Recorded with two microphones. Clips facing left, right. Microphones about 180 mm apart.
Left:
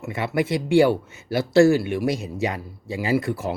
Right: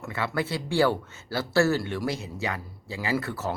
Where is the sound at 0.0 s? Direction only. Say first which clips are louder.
Left 3 dB; 15° left (ahead or behind).